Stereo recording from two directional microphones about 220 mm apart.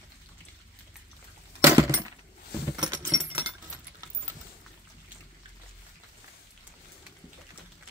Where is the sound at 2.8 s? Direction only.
15° right (ahead or behind).